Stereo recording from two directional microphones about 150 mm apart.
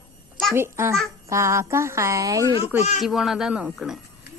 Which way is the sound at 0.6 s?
15° right (ahead or behind).